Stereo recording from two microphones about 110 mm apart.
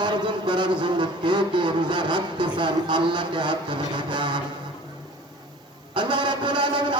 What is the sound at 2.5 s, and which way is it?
A man's voice, 45° right (ahead or behind).